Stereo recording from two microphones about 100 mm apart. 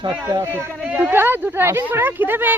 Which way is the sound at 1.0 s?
20° right (ahead or behind).